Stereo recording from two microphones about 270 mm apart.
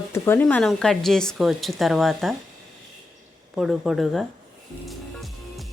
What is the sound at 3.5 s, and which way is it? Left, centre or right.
Speech, centre.